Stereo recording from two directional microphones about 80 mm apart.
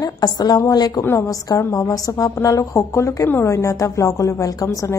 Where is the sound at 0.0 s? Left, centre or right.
Left.